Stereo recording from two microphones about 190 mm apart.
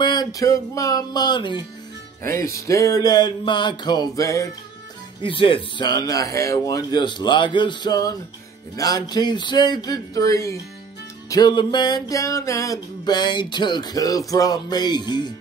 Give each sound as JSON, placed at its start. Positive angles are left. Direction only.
{"t": 0.0, "sound": "music", "side_deg": 20}
{"t": 2.2, "sound": "music", "side_deg": 15}
{"t": 5.2, "sound": "music", "side_deg": 25}